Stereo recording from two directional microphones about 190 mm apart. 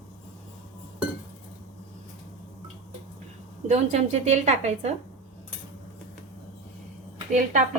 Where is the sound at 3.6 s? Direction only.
35° right (ahead or behind).